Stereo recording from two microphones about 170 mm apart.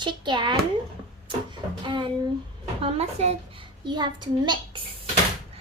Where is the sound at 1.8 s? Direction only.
30° right (ahead or behind).